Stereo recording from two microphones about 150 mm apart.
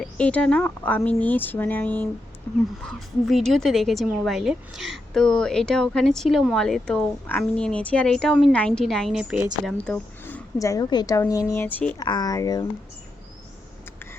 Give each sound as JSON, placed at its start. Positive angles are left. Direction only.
{"t": 0.0, "sound": "speech", "side_deg": 10}
{"t": 2.8, "sound": "speech", "side_deg": 0}
{"t": 9.6, "sound": "a sound", "side_deg": 5}
{"t": 10.6, "sound": "a woman's voice", "side_deg": 25}
{"t": 11.9, "sound": "a woman's voice", "side_deg": 25}